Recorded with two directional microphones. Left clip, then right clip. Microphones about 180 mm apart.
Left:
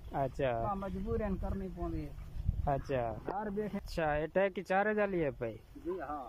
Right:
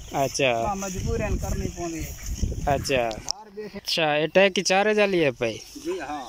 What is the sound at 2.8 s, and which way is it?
Speech, 5° right (ahead or behind).